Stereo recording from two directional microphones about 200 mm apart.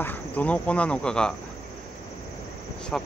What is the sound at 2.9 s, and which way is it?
Speech, 5° left (ahead or behind).